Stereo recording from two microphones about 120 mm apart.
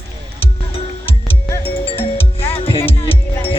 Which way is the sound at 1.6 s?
50° left (ahead or behind).